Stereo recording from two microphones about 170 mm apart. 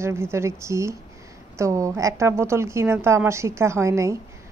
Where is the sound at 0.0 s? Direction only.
15° right (ahead or behind).